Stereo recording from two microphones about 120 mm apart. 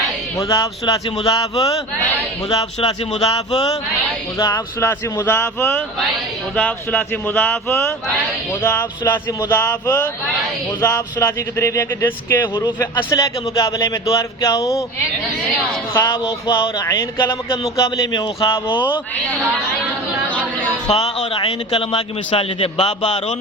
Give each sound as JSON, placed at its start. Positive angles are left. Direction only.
{"t": 0.3, "sound": "speech", "side_deg": 30}
{"t": 2.8, "sound": "speech", "side_deg": 60}
{"t": 4.4, "sound": "speech", "side_deg": 35}
{"t": 4.8, "sound": "speech", "side_deg": 20}
{"t": 13.1, "sound": "speech", "side_deg": 30}
{"t": 15.9, "sound": "speech", "side_deg": 25}
{"t": 20.8, "sound": "a man's voice", "side_deg": 55}